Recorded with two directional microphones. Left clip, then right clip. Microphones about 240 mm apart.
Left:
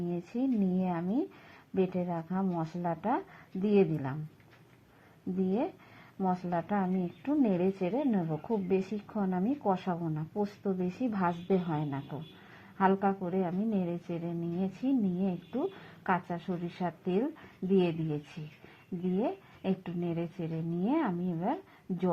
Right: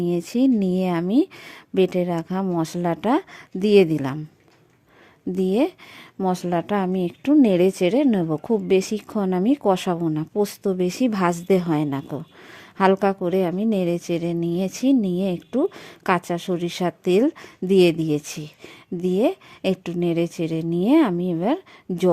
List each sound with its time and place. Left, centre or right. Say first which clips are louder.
0.1 s a woman's voice: right 12 dB; right
6.1 s a woman's voice: right 9 dB; right